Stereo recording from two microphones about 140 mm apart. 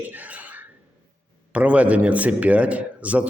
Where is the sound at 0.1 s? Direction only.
10° right (ahead or behind).